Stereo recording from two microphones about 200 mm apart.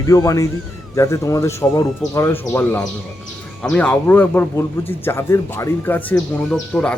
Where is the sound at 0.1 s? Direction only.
20° left (ahead or behind).